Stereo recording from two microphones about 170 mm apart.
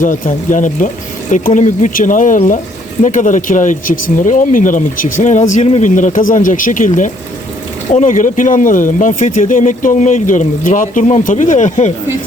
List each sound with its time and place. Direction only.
0.0 s speech: 50° left (ahead or behind)